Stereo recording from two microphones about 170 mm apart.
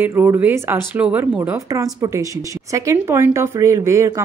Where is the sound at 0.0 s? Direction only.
15° right (ahead or behind).